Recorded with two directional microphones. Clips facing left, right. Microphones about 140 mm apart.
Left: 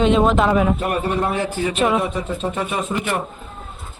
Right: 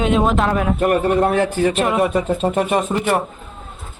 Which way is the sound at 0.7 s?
55° right (ahead or behind).